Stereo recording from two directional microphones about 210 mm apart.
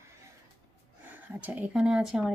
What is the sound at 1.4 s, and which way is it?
Speech, 5° right (ahead or behind).